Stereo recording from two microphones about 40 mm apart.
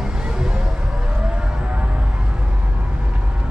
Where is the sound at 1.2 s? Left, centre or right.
Right.